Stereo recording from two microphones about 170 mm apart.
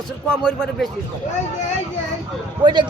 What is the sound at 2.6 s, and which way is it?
Speech, 25° right (ahead or behind).